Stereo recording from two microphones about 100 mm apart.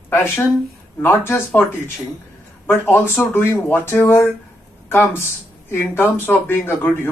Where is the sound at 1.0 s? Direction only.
20° left (ahead or behind).